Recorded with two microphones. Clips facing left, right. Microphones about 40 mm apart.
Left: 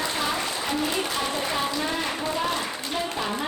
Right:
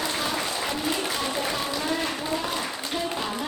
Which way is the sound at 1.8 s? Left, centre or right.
Centre.